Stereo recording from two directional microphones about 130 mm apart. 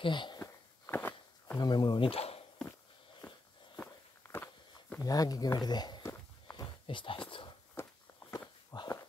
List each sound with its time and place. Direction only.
0.0 s speech: 35° left (ahead or behind)
0.4 s walk: 20° left (ahead or behind)
1.6 s speech: 30° left (ahead or behind); by 2.4 s 50° left (ahead or behind)
3.7 s walk: 15° left (ahead or behind)
5.0 s speech: 30° left (ahead or behind)
6.5 s a sound: 35° left (ahead or behind)
7.8 s walk: 20° left (ahead or behind)
8.2 s walk: 45° left (ahead or behind)
8.7 s a sound: 30° left (ahead or behind)